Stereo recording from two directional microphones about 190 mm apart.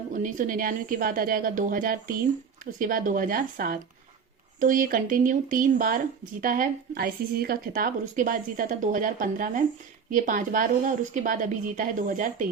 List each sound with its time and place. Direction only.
0.1 s a woman's voice: 45° right (ahead or behind)